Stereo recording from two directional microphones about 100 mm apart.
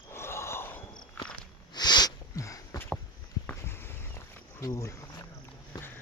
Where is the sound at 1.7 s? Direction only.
45° left (ahead or behind).